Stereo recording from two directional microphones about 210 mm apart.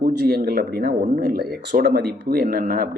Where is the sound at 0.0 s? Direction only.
50° right (ahead or behind).